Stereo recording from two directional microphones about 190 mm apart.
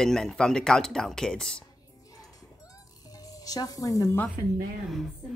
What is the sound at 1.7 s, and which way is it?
Music, 20° left (ahead or behind).